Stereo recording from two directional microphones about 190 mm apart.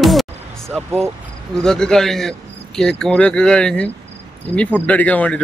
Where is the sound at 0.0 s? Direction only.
Centre (ahead or behind).